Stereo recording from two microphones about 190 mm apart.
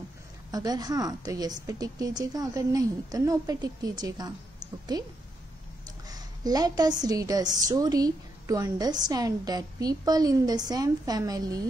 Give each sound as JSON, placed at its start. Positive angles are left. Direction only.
{"t": 0.5, "sound": "a woman's voice", "side_deg": -20}
{"t": 6.0, "sound": "a woman's voice", "side_deg": -20}